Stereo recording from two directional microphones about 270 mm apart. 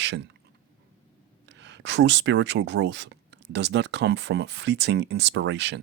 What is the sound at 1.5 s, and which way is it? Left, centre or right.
Speech, right.